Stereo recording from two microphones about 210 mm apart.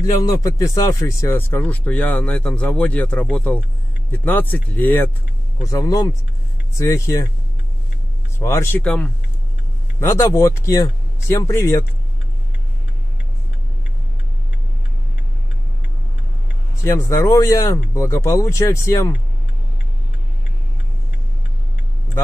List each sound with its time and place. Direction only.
0.0 s speech: 20° left (ahead or behind)
8.4 s speech: 15° left (ahead or behind)
16.8 s speech: 15° left (ahead or behind)